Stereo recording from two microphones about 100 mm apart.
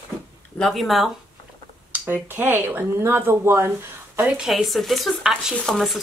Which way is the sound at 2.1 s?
20° right (ahead or behind).